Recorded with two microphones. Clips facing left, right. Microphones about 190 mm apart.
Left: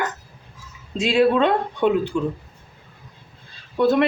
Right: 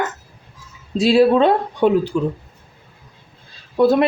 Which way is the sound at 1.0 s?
35° right (ahead or behind).